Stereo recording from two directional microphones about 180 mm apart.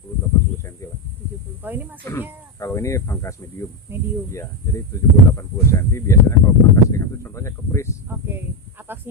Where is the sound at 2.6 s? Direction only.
15° left (ahead or behind).